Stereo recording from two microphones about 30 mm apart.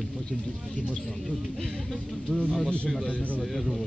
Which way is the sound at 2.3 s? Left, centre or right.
Left.